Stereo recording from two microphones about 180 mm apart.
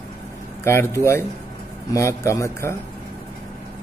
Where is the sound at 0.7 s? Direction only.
15° left (ahead or behind).